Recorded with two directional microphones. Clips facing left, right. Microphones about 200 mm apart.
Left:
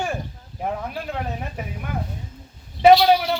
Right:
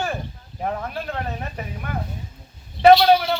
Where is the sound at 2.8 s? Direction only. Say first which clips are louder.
Right 1 dB; 10° left (ahead or behind).